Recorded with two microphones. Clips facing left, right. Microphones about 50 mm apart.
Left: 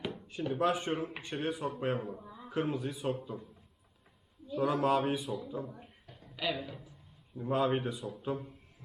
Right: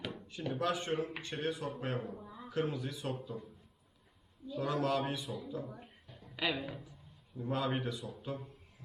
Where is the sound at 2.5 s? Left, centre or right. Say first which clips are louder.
Left 2 dB; left.